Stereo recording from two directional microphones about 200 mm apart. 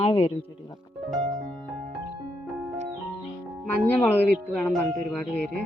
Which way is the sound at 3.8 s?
10° left (ahead or behind).